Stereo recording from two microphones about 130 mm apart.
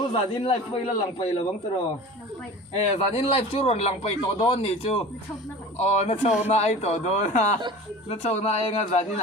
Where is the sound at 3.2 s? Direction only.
50° left (ahead or behind).